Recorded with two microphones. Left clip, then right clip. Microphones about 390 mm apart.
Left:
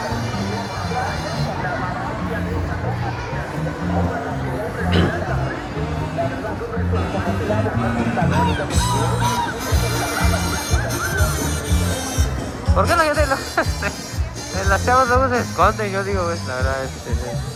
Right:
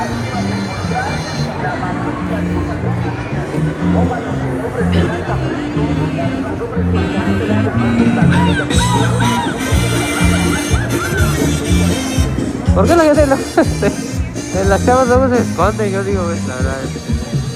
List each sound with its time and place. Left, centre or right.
10.1 s music: left
12.7 s music: centre
14.7 s speech: centre